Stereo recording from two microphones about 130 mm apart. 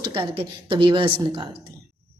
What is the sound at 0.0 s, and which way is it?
A woman's voice, 40° right (ahead or behind).